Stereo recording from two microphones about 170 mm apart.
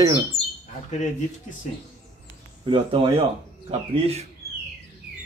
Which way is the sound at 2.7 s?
30° right (ahead or behind).